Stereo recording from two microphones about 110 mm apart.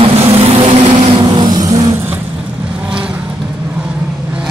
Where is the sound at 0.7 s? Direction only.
45° right (ahead or behind).